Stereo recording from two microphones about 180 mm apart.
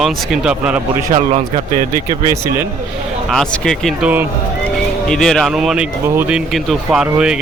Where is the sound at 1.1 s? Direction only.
35° right (ahead or behind).